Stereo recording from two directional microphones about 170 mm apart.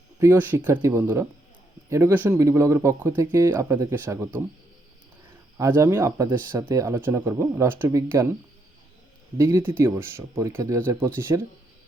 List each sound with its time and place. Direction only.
0.2 s speech: 15° right (ahead or behind)
5.5 s speech: 15° right (ahead or behind)
9.4 s speech: 15° right (ahead or behind)